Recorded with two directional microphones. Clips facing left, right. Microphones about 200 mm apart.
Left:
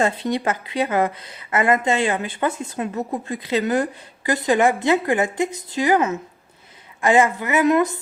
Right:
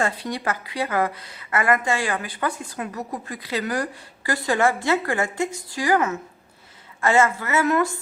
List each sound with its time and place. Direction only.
0.0 s a woman's voice: 20° left (ahead or behind)